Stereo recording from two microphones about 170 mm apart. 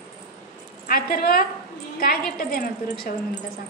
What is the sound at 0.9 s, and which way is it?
A woman's voice, 60° left (ahead or behind).